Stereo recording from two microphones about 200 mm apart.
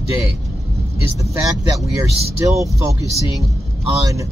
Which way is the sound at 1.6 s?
15° right (ahead or behind).